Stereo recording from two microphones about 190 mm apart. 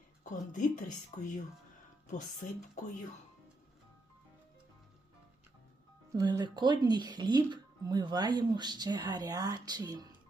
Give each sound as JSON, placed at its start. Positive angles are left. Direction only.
{"t": 0.3, "sound": "speech", "side_deg": 40}
{"t": 6.1, "sound": "speech", "side_deg": -20}